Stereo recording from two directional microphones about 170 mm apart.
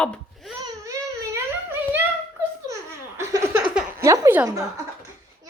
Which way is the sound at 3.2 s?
15° right (ahead or behind).